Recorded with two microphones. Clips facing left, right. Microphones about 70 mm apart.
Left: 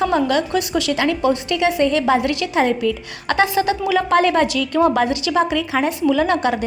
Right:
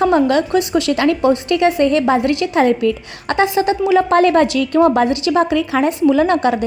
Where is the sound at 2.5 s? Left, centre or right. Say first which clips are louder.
Right 3 dB; right.